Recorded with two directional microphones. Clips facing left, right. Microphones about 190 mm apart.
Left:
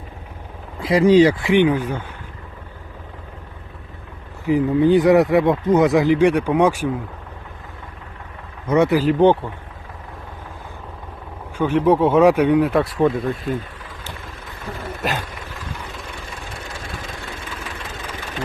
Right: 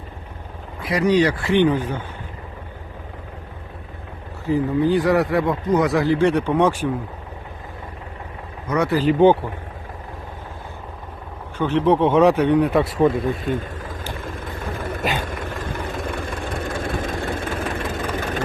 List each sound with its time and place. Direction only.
0.8 s speech: 25° left (ahead or behind); by 2.0 s 10° left (ahead or behind)
4.4 s speech: 20° left (ahead or behind)
8.7 s speech: 25° left (ahead or behind)
9.0 s a man's voice: centre (ahead or behind)
11.5 s a man's voice: 10° left (ahead or behind)
13.6 s vehicle: 45° right (ahead or behind)